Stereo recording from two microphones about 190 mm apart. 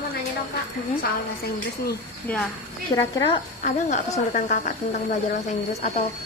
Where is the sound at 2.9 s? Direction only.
20° left (ahead or behind).